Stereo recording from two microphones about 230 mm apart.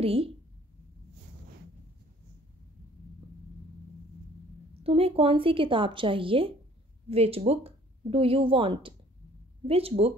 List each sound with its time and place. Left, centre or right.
0.0 s a woman's voice: right
4.8 s speech: right